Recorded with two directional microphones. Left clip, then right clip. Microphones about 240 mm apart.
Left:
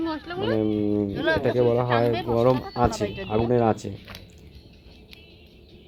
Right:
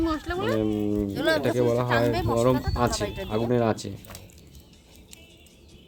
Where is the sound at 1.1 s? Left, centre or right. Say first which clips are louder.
Right 2 dB; right.